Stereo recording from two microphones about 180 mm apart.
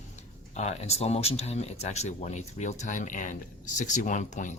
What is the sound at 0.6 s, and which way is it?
Speech, 35° left (ahead or behind).